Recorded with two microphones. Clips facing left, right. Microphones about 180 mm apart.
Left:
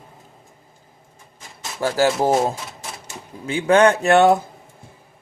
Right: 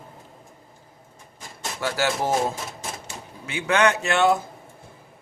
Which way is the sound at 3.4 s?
30° left (ahead or behind).